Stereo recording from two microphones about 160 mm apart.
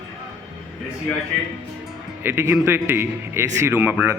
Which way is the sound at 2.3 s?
15° right (ahead or behind).